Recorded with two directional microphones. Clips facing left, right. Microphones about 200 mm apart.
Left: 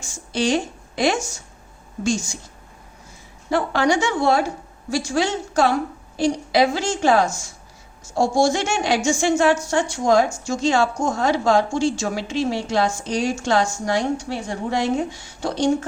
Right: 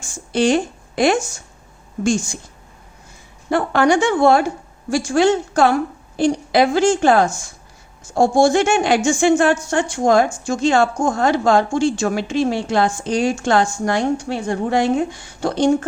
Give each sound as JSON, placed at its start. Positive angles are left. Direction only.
{"t": 0.0, "sound": "a woman's voice", "side_deg": -55}
{"t": 3.5, "sound": "a woman's voice", "side_deg": -55}